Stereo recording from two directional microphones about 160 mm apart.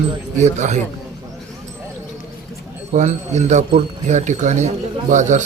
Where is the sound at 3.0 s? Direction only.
45° right (ahead or behind).